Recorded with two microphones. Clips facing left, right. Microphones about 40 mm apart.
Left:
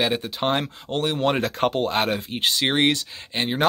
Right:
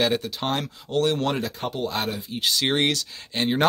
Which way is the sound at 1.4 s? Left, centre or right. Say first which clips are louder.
Left 6 dB; left.